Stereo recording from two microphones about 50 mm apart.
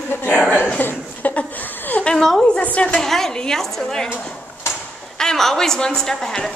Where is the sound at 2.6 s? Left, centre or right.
Left.